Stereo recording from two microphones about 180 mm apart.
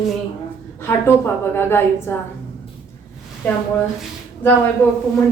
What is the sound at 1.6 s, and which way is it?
Speech, 15° left (ahead or behind).